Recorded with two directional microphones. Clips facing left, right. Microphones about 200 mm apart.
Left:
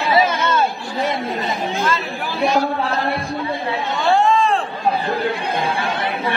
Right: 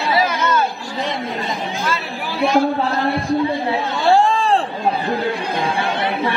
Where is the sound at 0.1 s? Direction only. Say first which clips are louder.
Left 1 dB; 25° left (ahead or behind).